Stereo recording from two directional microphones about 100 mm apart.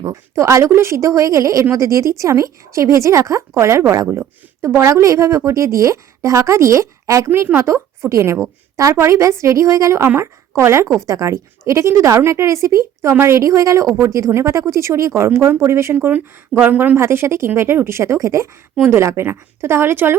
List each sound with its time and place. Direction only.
0.0 s speech: 35° right (ahead or behind)
7.3 s a woman's voice: 20° right (ahead or behind)